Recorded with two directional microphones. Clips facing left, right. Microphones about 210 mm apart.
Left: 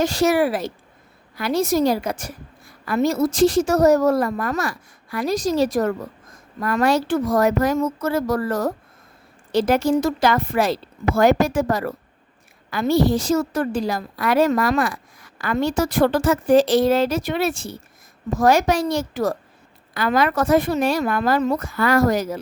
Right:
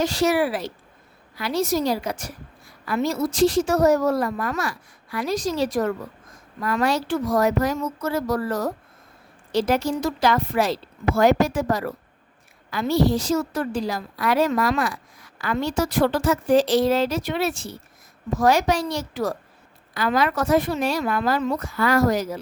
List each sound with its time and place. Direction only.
0.0 s a woman's voice: 50° left (ahead or behind)